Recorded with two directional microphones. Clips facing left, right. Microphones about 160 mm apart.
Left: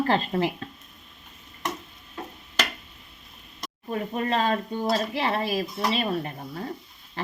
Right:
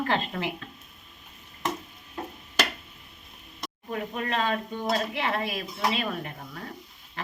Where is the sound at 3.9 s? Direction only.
35° left (ahead or behind).